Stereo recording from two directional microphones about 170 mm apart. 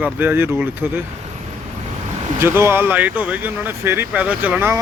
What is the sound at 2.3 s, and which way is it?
Speech, 15° right (ahead or behind).